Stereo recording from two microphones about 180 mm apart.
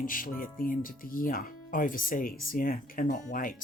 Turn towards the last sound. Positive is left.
turn(degrees=50)  # may be behind; listen again after turning